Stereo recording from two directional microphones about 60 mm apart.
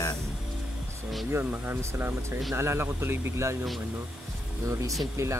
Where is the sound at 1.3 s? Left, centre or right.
Right.